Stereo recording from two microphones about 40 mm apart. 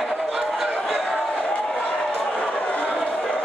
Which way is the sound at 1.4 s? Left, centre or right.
Left.